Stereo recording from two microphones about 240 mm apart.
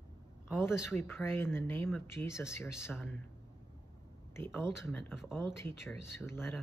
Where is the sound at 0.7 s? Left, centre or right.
Centre.